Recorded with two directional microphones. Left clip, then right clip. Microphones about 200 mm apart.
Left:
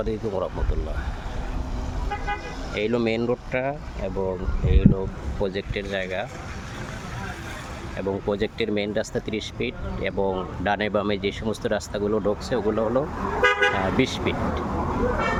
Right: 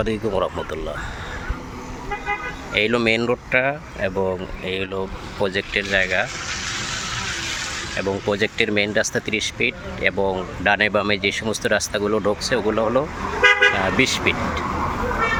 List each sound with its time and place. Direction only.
0.0 s speech: centre (ahead or behind)
2.7 s speech: 5° left (ahead or behind)
6.5 s vehicle: 45° left (ahead or behind)
7.9 s speech: centre (ahead or behind)
13.4 s toot: 25° left (ahead or behind)
13.7 s speech: 5° left (ahead or behind)